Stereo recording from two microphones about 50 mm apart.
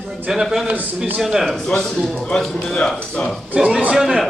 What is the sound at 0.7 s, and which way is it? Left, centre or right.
Speech, right.